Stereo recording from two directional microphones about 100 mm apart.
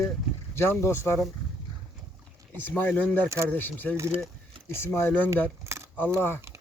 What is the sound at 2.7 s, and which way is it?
Speech, 20° left (ahead or behind).